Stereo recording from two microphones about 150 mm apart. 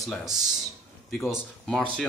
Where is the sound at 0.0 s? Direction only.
Centre (ahead or behind).